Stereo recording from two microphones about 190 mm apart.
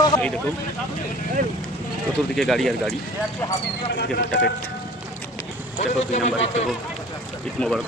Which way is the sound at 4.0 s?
60° left (ahead or behind).